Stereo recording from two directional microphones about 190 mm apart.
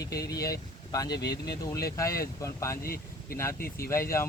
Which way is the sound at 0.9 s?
20° left (ahead or behind).